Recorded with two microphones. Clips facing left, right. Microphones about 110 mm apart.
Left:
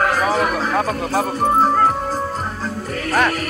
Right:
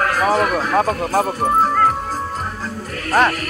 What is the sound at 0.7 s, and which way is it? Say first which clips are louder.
Speech: right 2 dB; 35° right (ahead or behind).